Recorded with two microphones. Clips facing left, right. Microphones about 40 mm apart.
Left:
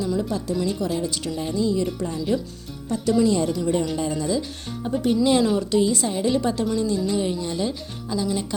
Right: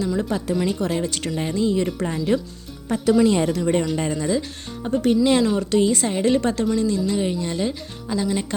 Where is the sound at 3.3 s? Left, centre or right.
Right.